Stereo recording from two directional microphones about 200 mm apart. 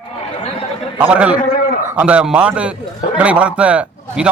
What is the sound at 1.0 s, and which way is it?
A man's voice, 5° right (ahead or behind).